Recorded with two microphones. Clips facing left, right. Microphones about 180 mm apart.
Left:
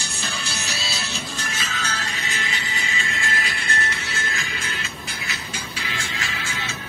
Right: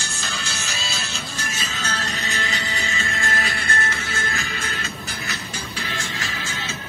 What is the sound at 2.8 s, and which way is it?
Music, 45° right (ahead or behind).